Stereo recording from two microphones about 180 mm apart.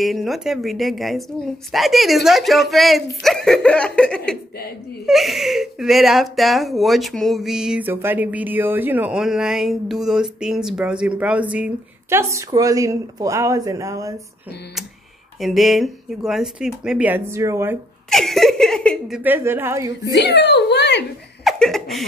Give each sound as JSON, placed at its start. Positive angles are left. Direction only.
{"t": 0.0, "sound": "a woman's voice", "side_deg": 0}
{"t": 15.4, "sound": "speech", "side_deg": 0}
{"t": 18.1, "sound": "speech", "side_deg": 0}
{"t": 20.1, "sound": "speech", "side_deg": 70}
{"t": 21.5, "sound": "laughter", "side_deg": 0}